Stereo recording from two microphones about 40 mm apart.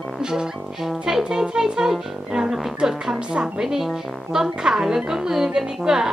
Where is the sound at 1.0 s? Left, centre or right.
Centre.